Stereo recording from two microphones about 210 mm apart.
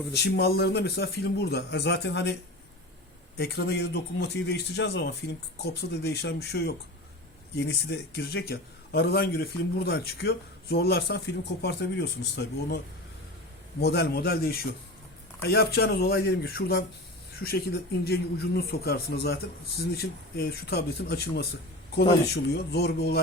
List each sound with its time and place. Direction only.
0.1 s a man's voice: 50° left (ahead or behind)
3.3 s a man's voice: 50° left (ahead or behind)
13.8 s a man's voice: 50° left (ahead or behind)